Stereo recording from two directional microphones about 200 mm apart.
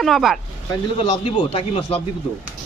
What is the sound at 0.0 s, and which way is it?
Speech, centre (ahead or behind).